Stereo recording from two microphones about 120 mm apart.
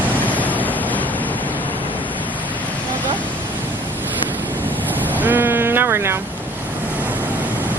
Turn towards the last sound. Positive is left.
turn(degrees=-20)  # may be behind; listen again after turning